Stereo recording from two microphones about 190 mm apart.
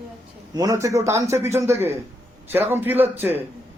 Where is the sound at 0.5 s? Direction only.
20° right (ahead or behind).